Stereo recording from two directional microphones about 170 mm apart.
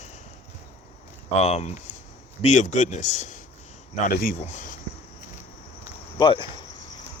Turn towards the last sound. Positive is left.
turn(degrees=30)  # may be behind; listen again after turning